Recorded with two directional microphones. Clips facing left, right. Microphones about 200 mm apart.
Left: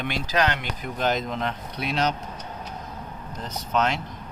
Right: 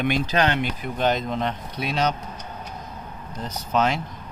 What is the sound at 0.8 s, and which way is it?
Speech, centre (ahead or behind).